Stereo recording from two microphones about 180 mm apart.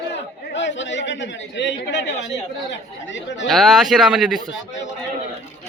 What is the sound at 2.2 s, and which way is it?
Chatter, 80° left.